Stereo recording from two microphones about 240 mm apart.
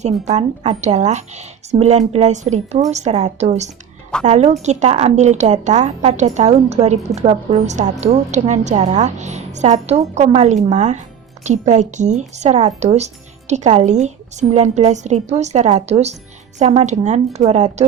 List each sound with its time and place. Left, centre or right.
0.0 s speech: right